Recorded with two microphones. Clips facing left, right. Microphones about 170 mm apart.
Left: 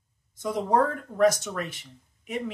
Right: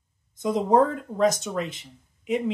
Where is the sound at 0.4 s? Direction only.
20° right (ahead or behind).